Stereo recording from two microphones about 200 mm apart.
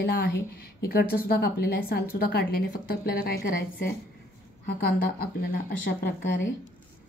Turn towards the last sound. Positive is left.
turn(degrees=45)  # may be behind; listen again after turning